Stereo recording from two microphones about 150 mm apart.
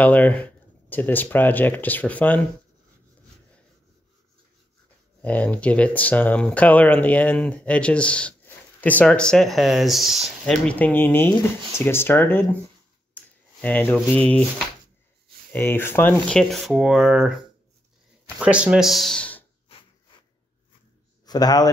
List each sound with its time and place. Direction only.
0.0 s speech: 10° left (ahead or behind)
5.2 s speech: 10° left (ahead or behind)
13.1 s a sound: 10° left (ahead or behind)
14.1 s speech: 10° left (ahead or behind)
15.5 s speech: 15° left (ahead or behind)
21.3 s a man's voice: 25° left (ahead or behind)